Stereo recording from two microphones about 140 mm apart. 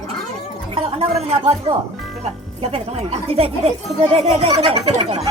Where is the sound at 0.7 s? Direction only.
45° right (ahead or behind).